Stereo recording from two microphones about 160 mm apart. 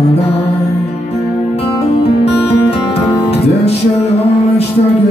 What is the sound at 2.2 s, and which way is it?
Music, 40° left (ahead or behind).